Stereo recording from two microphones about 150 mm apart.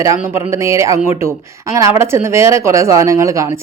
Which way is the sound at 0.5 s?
20° right (ahead or behind).